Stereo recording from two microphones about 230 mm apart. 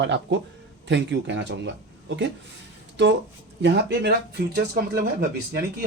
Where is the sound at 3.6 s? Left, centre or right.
Right.